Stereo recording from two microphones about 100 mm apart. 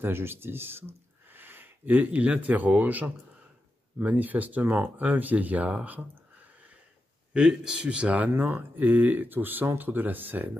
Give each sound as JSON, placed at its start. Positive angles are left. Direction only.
{"t": 0.0, "sound": "speech", "side_deg": -25}
{"t": 7.3, "sound": "speech", "side_deg": -5}